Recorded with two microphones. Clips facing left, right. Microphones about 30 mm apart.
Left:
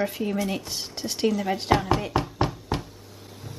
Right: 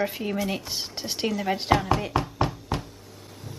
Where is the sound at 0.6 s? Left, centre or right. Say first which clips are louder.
Even; centre.